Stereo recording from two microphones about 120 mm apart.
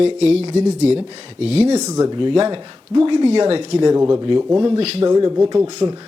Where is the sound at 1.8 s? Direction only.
30° right (ahead or behind).